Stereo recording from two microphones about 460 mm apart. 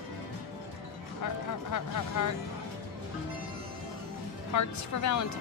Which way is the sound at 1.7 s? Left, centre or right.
Left.